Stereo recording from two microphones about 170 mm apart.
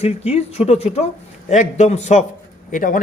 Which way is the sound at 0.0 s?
40° left (ahead or behind).